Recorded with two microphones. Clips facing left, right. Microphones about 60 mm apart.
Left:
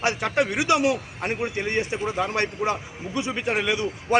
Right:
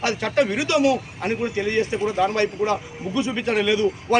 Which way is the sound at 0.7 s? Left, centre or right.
Left.